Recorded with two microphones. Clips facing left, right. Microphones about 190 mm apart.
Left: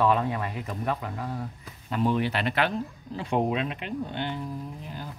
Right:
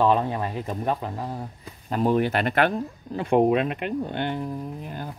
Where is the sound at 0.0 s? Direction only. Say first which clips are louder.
Right 3 dB; 30° right (ahead or behind).